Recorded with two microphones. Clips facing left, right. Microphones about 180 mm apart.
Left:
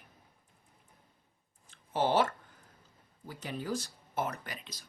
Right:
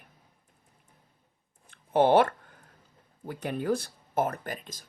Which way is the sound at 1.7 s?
60° right (ahead or behind).